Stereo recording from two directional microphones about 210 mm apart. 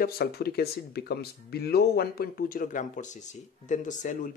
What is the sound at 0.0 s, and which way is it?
Speech, 45° left (ahead or behind).